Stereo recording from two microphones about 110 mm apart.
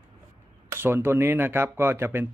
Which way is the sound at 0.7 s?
20° right (ahead or behind).